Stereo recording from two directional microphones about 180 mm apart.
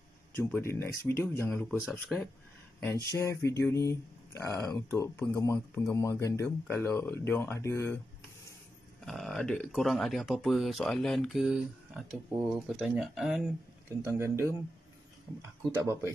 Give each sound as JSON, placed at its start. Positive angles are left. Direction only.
{"t": 0.4, "sound": "speech", "side_deg": 15}
{"t": 3.1, "sound": "speech", "side_deg": 15}
{"t": 9.0, "sound": "speech", "side_deg": 0}
{"t": 13.8, "sound": "speech", "side_deg": -15}
{"t": 15.7, "sound": "speech", "side_deg": -15}